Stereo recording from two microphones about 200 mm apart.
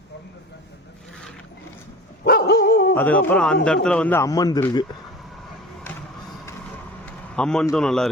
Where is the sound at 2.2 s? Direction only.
50° left (ahead or behind).